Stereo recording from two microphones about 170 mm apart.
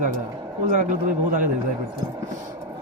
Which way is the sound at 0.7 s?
50° right (ahead or behind).